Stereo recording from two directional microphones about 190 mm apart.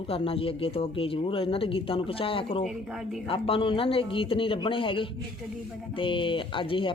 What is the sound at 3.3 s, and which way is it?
Speech, 30° left (ahead or behind).